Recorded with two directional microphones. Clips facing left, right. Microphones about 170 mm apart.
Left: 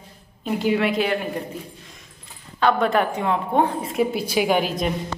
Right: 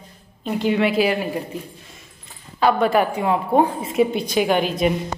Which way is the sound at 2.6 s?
10° right (ahead or behind).